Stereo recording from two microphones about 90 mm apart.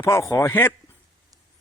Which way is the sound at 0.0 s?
30° left (ahead or behind).